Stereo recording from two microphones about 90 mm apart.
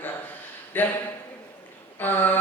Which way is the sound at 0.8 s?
20° left (ahead or behind).